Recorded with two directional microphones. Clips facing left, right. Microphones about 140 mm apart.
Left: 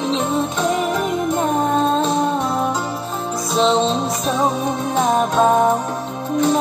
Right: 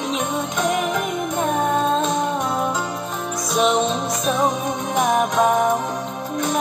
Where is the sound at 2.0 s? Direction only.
30° left (ahead or behind).